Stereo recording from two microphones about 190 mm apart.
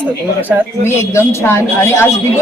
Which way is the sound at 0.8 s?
15° left (ahead or behind).